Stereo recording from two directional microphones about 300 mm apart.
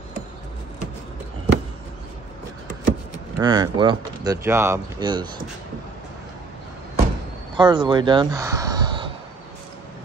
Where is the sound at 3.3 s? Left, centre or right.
Centre.